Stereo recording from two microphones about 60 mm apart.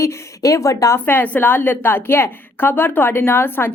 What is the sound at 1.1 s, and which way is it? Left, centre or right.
Speech, left.